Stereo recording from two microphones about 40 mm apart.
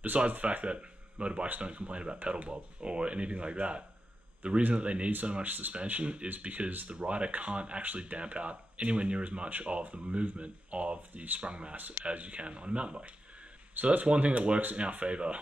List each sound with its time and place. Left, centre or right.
0.3 s speech: right
5.4 s speech: right
5.9 s speech: right
11.3 s speech: right
11.7 s speech: right
12.0 s speech: right